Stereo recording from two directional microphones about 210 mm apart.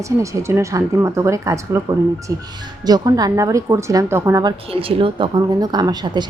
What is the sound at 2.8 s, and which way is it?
A woman's voice, 20° right (ahead or behind).